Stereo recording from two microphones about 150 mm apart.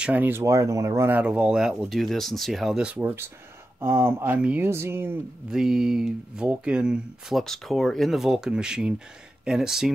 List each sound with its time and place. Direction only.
0.0 s speech: 10° right (ahead or behind)
5.5 s speech: 5° right (ahead or behind)